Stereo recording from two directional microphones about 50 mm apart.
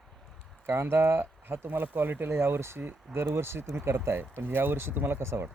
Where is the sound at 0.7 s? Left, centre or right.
Right.